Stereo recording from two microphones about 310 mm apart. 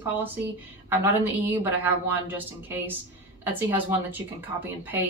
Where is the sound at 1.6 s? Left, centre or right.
Centre.